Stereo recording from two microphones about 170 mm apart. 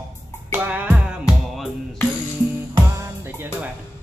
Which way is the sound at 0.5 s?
10° right (ahead or behind).